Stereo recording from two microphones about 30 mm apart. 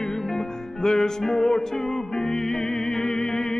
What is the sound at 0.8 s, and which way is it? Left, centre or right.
Music, centre.